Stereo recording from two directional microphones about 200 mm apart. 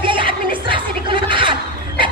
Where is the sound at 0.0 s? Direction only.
25° right (ahead or behind).